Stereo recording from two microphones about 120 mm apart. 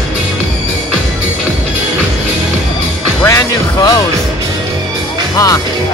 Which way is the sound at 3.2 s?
25° left (ahead or behind).